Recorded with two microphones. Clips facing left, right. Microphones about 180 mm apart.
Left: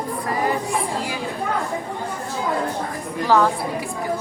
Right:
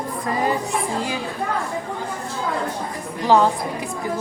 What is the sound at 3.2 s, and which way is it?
Speech, 20° right (ahead or behind).